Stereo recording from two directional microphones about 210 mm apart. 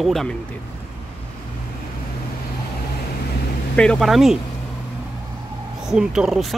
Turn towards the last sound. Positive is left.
turn(degrees=0)  # may be behind; listen again after turning